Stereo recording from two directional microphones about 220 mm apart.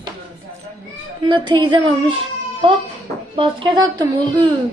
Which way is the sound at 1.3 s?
20° right (ahead or behind).